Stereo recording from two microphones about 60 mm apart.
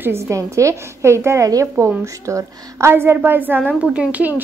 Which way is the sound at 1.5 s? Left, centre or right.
Right.